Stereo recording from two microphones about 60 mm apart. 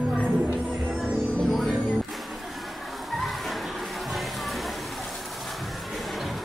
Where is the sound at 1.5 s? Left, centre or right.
Centre.